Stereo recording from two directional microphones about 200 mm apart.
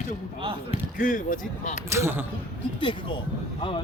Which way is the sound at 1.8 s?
15° right (ahead or behind).